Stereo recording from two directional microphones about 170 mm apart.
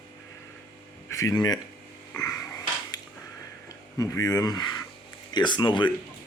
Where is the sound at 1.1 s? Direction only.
20° left (ahead or behind).